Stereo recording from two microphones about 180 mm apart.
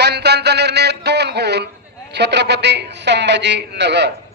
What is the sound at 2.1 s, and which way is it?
Speech, 70° right (ahead or behind).